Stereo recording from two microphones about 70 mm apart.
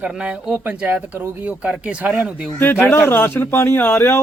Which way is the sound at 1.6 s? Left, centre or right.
Centre.